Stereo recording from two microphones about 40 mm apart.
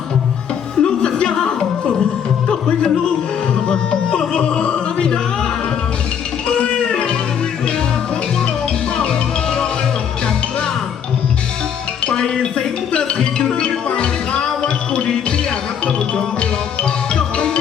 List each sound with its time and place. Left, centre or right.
0.8 s music: centre
6.5 s music: left
9.0 s music: centre
12.0 s music: left
17.2 s music: left